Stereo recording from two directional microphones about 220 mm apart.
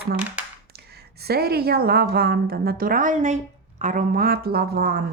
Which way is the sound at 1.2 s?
45° right (ahead or behind).